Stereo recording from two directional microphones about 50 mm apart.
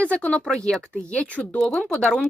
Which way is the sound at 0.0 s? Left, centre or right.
Left.